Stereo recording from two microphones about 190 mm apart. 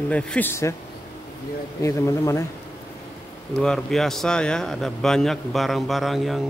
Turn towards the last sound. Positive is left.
turn(degrees=0)  # may be behind; listen again after turning